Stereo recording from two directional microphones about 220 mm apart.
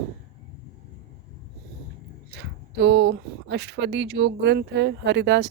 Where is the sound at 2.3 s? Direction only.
50° right (ahead or behind).